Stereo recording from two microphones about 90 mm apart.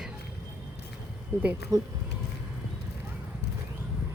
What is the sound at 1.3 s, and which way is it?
Speech, 25° right (ahead or behind).